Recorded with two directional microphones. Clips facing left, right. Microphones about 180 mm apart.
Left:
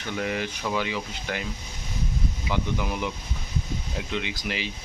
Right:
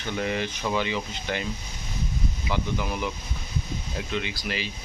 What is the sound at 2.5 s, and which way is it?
Speech, 10° left (ahead or behind).